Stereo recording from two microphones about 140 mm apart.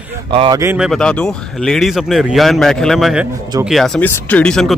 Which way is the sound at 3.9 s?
10° left (ahead or behind).